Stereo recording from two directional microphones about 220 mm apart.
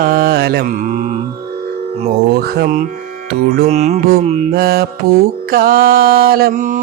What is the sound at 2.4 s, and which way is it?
Mantra, 40° right (ahead or behind).